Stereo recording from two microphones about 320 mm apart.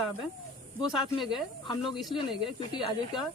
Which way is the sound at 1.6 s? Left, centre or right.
Centre.